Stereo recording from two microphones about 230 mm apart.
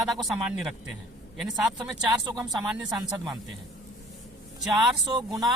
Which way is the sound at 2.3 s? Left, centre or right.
Centre.